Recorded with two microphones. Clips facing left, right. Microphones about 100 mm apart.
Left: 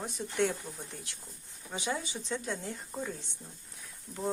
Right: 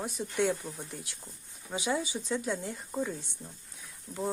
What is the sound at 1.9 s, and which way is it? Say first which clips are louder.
Speech: right 5 dB; 15° right (ahead or behind).